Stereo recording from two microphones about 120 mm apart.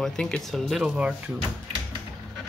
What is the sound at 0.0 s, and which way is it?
Speech, 5° left (ahead or behind).